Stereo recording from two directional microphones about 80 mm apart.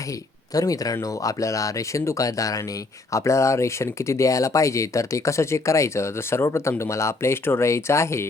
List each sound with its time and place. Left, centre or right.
0.5 s speech: left